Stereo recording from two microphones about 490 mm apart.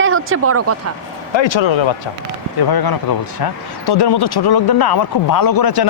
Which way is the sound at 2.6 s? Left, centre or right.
Left.